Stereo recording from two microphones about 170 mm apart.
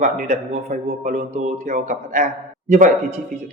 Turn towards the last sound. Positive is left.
turn(degrees=-45)  # may be behind; listen again after turning